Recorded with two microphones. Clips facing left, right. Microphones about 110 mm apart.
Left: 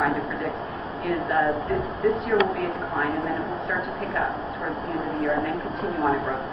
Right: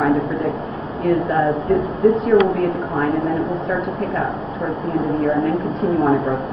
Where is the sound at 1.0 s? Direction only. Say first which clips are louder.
Right 6 dB; 30° right (ahead or behind).